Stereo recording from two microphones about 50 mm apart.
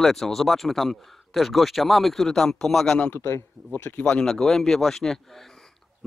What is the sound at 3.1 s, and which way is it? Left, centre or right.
Speech, left.